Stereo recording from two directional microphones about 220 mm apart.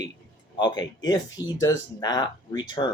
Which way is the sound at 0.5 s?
20° left (ahead or behind).